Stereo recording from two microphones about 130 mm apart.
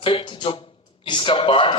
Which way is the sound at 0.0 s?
40° left (ahead or behind).